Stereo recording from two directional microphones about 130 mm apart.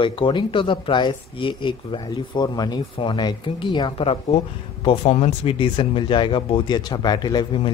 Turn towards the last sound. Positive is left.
turn(degrees=35)  # may be behind; listen again after turning